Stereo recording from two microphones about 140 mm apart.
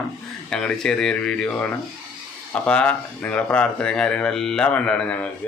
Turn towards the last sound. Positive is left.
turn(degrees=10)  # may be behind; listen again after turning